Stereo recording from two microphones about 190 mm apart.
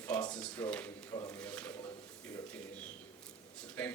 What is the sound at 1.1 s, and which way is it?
Speech, 20° left (ahead or behind).